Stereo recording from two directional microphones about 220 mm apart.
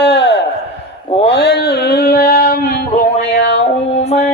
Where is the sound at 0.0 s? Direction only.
50° left (ahead or behind).